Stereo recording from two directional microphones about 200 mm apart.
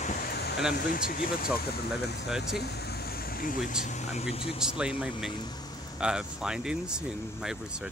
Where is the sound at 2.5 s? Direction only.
55° left (ahead or behind).